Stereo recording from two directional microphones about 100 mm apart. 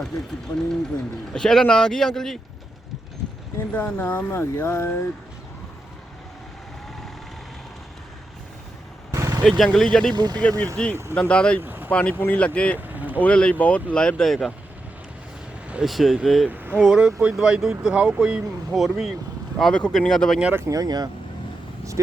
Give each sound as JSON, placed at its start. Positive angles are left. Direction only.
{"t": 1.3, "sound": "speech", "side_deg": 5}
{"t": 3.7, "sound": "speech", "side_deg": 20}
{"t": 9.1, "sound": "vehicle", "side_deg": -35}
{"t": 9.4, "sound": "speech", "side_deg": 0}
{"t": 10.2, "sound": "speech", "side_deg": -45}
{"t": 10.8, "sound": "speech", "side_deg": 5}
{"t": 11.6, "sound": "vehicle", "side_deg": -20}
{"t": 11.9, "sound": "speech", "side_deg": 10}
{"t": 12.9, "sound": "vehicle", "side_deg": -15}
{"t": 13.2, "sound": "speech", "side_deg": 10}
{"t": 15.7, "sound": "speech", "side_deg": -5}
{"t": 20.4, "sound": "speech", "side_deg": -20}
{"t": 20.7, "sound": "speech", "side_deg": -40}